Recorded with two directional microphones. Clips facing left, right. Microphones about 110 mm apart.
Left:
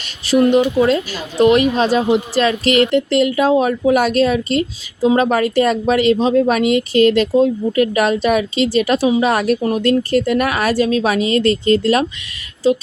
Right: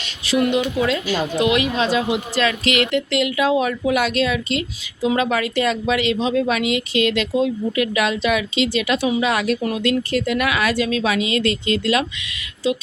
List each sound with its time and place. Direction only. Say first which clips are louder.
0.3 s speech: left 6 dB; 35° left (ahead or behind)